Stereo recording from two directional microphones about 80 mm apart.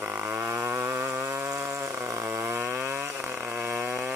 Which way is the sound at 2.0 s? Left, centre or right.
Right.